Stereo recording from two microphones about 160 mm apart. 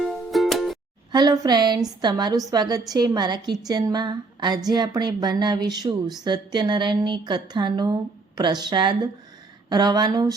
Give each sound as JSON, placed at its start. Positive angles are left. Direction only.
{"t": 0.3, "sound": "music", "side_deg": 0}
{"t": 1.1, "sound": "speech", "side_deg": -25}